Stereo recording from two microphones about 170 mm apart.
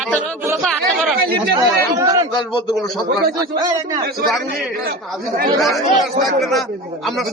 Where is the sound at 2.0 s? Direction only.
20° right (ahead or behind).